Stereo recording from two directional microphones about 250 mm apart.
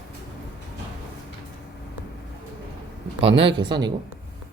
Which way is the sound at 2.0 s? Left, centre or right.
Centre.